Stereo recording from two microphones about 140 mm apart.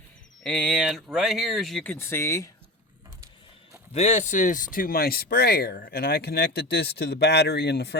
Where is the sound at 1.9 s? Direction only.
15° left (ahead or behind).